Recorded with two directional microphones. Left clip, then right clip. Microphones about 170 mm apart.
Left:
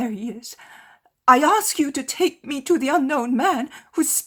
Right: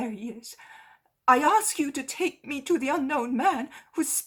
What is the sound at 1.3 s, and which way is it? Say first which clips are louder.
A woman's voice: left 5 dB; 50° left (ahead or behind).